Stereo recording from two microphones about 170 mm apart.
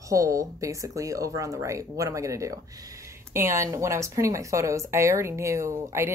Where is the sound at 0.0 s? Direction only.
20° right (ahead or behind).